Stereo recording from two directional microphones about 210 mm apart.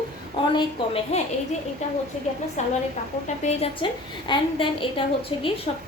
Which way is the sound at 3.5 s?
25° left (ahead or behind).